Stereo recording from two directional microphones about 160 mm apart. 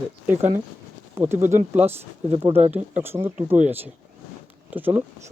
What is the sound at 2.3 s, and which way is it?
Speech, 40° right (ahead or behind).